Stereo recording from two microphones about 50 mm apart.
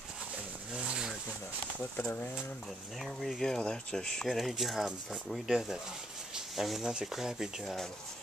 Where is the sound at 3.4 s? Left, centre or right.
Centre.